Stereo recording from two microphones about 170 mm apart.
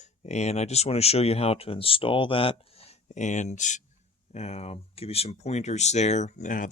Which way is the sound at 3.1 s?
45° left (ahead or behind).